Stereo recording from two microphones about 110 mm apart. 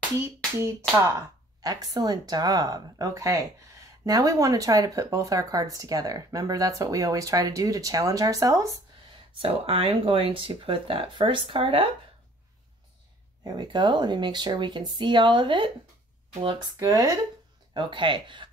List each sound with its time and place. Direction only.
0.6 s speech: 25° right (ahead or behind)
9.4 s speech: 60° right (ahead or behind)
13.4 s speech: 40° right (ahead or behind)
16.8 s speech: 30° right (ahead or behind)
17.7 s speech: 50° right (ahead or behind)